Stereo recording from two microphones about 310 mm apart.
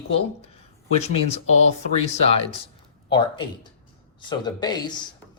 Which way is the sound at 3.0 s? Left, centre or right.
Centre.